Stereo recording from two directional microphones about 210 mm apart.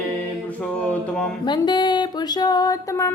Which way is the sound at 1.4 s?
20° left (ahead or behind).